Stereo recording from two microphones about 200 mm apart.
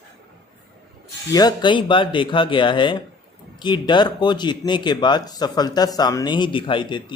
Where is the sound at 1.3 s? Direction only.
20° left (ahead or behind).